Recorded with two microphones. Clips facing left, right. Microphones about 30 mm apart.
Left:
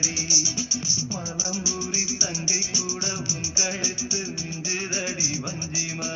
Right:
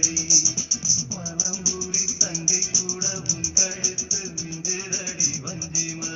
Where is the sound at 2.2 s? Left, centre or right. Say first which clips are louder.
Even; left.